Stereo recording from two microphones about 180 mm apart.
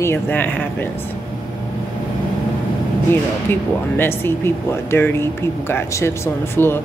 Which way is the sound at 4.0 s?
10° left (ahead or behind).